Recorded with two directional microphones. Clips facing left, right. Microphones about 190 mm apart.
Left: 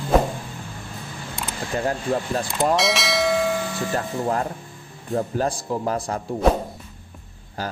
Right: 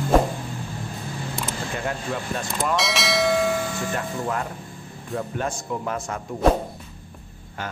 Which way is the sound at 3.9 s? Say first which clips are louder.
Left 3 dB; 35° left (ahead or behind).